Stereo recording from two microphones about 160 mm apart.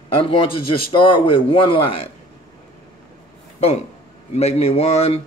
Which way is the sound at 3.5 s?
40° left (ahead or behind).